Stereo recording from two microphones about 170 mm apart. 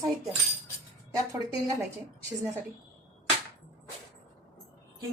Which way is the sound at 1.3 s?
20° right (ahead or behind).